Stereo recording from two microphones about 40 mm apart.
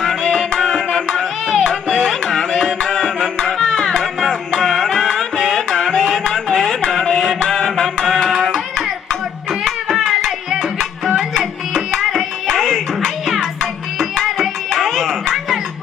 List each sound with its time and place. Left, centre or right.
0.0 s music: centre
9.5 s music: centre